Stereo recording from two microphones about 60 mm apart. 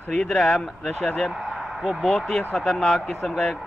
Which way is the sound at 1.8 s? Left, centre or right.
Centre.